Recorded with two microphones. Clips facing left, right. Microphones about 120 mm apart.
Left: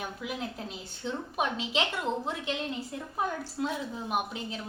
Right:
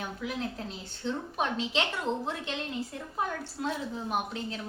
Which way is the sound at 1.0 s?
5° left (ahead or behind).